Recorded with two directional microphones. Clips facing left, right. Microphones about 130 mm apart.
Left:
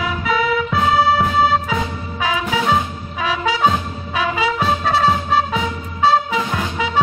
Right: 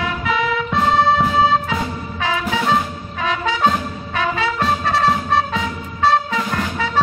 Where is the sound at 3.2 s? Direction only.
10° left (ahead or behind).